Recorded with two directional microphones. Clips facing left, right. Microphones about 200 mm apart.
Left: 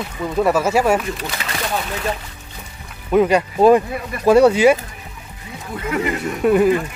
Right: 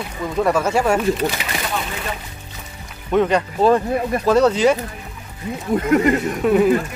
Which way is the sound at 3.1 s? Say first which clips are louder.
Left 2 dB; 10° left (ahead or behind).